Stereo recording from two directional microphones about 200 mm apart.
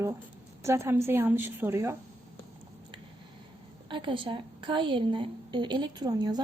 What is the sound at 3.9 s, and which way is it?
A woman's voice, 25° right (ahead or behind).